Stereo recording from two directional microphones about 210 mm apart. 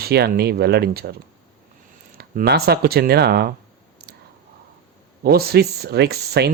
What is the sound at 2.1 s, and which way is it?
Speech, 50° right (ahead or behind).